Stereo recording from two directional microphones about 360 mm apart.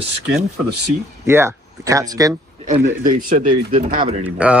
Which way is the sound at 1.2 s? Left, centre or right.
Centre.